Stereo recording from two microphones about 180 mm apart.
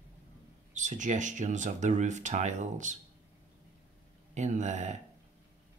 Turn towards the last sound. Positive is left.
turn(degrees=-40)  # may be behind; listen again after turning